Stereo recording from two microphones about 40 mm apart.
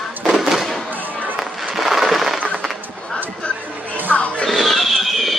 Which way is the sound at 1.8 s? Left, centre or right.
Centre.